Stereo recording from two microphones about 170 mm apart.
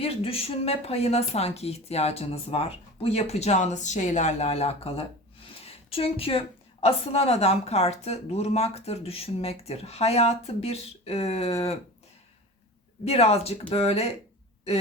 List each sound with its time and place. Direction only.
0.0 s a woman's voice: 35° left (ahead or behind)
13.1 s a woman's voice: 35° left (ahead or behind)